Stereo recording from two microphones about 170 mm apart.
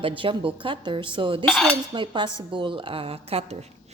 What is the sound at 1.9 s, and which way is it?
A woman's voice, 25° right (ahead or behind).